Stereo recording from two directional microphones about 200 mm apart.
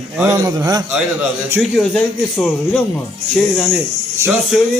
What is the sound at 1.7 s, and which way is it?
A man's voice, 5° left (ahead or behind).